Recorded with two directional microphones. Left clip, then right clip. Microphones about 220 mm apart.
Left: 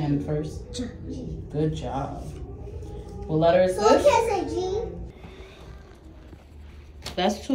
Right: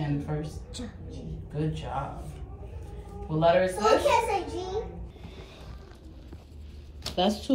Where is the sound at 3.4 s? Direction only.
5° left (ahead or behind).